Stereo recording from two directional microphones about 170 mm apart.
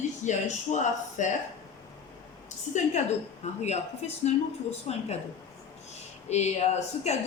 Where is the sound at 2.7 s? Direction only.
45° left (ahead or behind).